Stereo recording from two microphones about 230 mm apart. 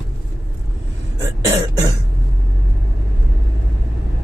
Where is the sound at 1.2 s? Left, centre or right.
Centre.